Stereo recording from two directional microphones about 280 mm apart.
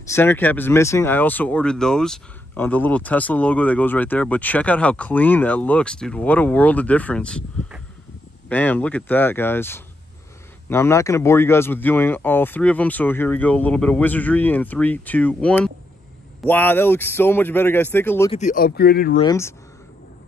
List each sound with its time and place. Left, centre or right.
0.1 s speech: centre
18.3 s speech: left
19.1 s speech: centre